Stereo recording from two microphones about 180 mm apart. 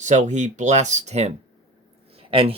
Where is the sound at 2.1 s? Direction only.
30° right (ahead or behind).